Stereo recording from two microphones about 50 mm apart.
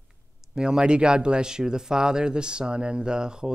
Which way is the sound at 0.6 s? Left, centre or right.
Centre.